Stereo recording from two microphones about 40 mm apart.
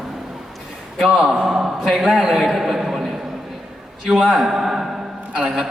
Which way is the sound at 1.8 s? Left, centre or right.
Centre.